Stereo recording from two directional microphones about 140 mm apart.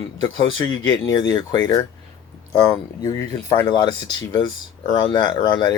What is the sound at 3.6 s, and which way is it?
Speech, 30° left (ahead or behind).